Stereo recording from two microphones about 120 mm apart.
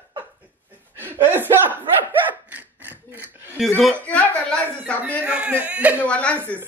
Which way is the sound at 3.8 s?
10° left (ahead or behind).